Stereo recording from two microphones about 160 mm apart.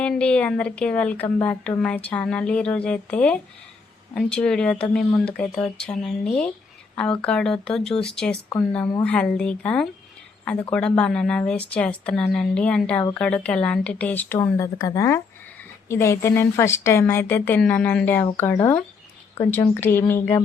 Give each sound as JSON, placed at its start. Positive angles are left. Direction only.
{"t": 0.0, "sound": "speech", "side_deg": 5}
{"t": 8.8, "sound": "a woman's voice", "side_deg": 25}
{"t": 9.0, "sound": "speech", "side_deg": 5}